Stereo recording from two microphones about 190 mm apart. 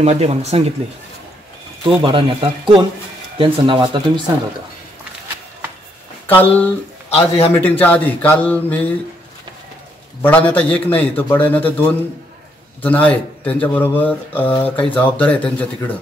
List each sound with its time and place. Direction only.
0.0 s speech: 35° right (ahead or behind)
1.8 s speech: 25° right (ahead or behind)
6.2 s speech: 10° left (ahead or behind)
7.2 s a man's voice: 30° left (ahead or behind)
7.5 s speech: 10° left (ahead or behind)
10.2 s speech: 10° left (ahead or behind)
12.8 s speech: 10° left (ahead or behind)